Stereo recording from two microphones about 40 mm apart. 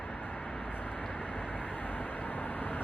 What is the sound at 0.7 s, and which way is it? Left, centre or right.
Vehicle, left.